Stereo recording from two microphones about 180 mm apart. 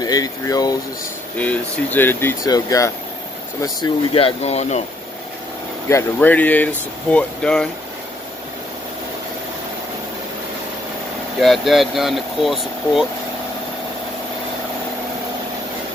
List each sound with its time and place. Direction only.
0.0 s speech: 20° left (ahead or behind)
1.4 s speech: 10° left (ahead or behind); by 4.8 s 35° left (ahead or behind)
5.9 s speech: 10° left (ahead or behind)
11.3 s speech: centre (ahead or behind)